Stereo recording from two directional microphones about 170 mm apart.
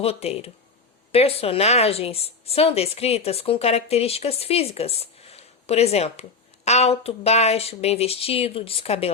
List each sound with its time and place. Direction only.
0.0 s a woman's voice: 35° left (ahead or behind)